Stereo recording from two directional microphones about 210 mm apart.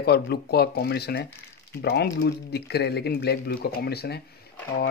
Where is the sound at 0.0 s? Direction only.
50° left (ahead or behind).